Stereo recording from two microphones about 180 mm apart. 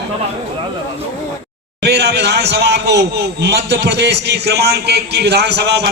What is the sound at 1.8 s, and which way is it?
A man's voice, 70° right (ahead or behind).